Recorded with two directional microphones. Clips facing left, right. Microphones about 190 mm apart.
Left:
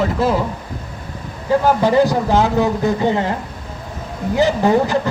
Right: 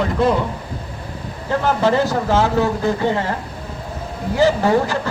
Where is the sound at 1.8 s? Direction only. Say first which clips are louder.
Left 3 dB; 15° left (ahead or behind).